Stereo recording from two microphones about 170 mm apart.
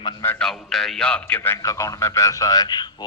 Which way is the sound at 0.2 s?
10° left (ahead or behind).